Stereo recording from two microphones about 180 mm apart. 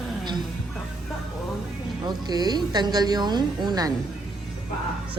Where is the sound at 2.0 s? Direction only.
20° right (ahead or behind).